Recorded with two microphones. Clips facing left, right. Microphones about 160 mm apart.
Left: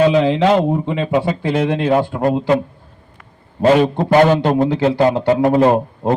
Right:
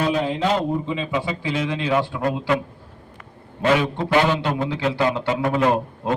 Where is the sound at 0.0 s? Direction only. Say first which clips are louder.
Left 8 dB; 90° left.